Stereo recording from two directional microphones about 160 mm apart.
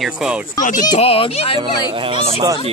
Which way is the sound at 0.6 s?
55° left (ahead or behind).